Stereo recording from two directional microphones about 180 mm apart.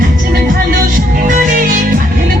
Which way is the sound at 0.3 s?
55° right (ahead or behind).